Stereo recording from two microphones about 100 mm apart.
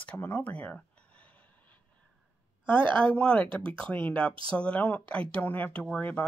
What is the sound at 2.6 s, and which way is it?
Speech, 55° right (ahead or behind).